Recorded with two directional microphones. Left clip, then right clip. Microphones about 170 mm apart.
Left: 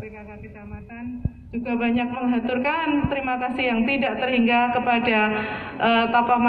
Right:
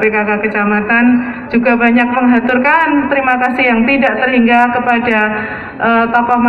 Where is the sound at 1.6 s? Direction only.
15° right (ahead or behind).